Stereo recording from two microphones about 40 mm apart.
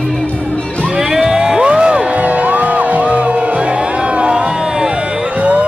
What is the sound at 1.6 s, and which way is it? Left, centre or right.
Music, right.